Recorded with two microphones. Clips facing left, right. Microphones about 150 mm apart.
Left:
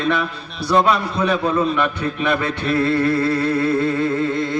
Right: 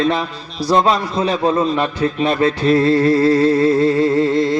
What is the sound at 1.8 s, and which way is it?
Humming, 30° right (ahead or behind).